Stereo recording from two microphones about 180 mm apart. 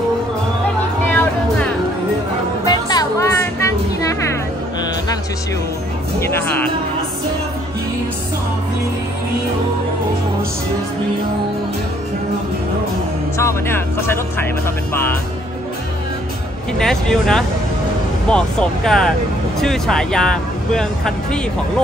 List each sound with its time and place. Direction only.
1.0 s music: 10° left (ahead or behind)
2.6 s music: 20° left (ahead or behind)
6.1 s speech: 10° left (ahead or behind)
13.4 s speech: 15° left (ahead or behind)
16.7 s speech: 5° left (ahead or behind)